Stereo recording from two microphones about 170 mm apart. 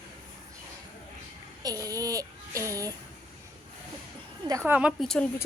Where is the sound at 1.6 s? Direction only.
20° right (ahead or behind).